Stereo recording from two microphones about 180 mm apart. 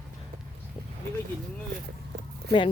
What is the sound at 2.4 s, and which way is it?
Speech, 65° right (ahead or behind).